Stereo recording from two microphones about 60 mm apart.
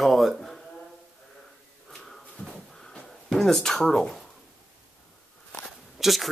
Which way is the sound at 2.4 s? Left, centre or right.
Left.